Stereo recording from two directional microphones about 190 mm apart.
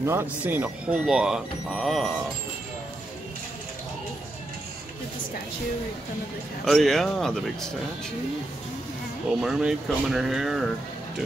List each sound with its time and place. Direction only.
0.0 s speech: 10° right (ahead or behind)
6.6 s speech: centre (ahead or behind)
9.3 s speech: 5° right (ahead or behind)